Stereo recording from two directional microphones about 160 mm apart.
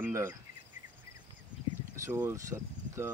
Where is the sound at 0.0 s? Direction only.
15° right (ahead or behind).